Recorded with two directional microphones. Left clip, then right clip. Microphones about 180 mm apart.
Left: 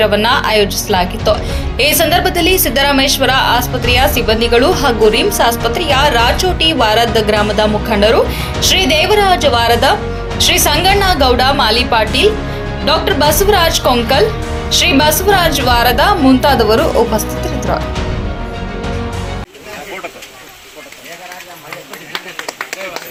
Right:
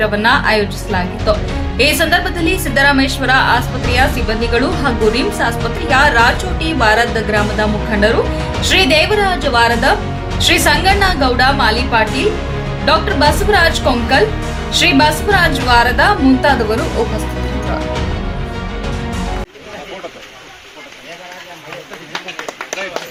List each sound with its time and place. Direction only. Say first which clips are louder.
0.0 s a woman's voice: left 1 dB; 15° left (ahead or behind)